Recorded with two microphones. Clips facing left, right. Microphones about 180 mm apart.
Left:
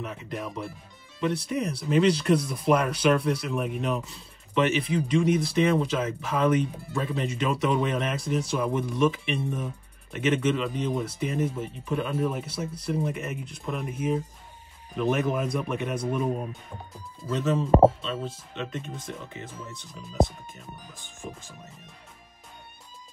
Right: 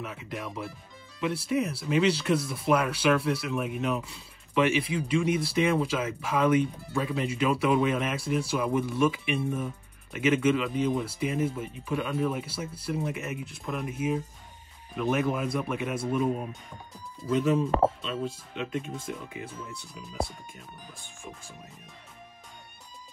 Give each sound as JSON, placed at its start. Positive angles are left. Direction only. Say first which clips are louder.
{"t": 0.0, "sound": "speech", "louder": "left 2 dB", "side_deg": -5}
{"t": 17.6, "sound": "speech", "louder": "left 7 dB", "side_deg": 25}
{"t": 18.0, "sound": "speech", "louder": "even", "side_deg": -5}